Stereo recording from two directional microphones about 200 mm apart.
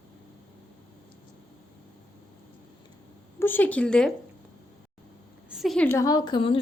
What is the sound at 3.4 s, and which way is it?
Speech, 10° left (ahead or behind).